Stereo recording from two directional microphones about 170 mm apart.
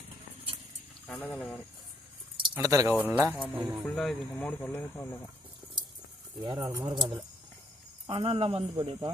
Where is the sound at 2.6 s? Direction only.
20° right (ahead or behind); by 5.2 s 15° left (ahead or behind).